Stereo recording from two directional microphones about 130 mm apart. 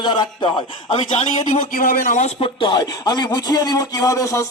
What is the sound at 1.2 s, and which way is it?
Speech, 55° left (ahead or behind).